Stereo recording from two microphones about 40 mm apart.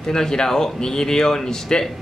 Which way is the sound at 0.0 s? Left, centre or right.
Centre.